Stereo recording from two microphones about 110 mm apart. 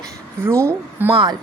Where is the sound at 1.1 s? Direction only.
45° right (ahead or behind).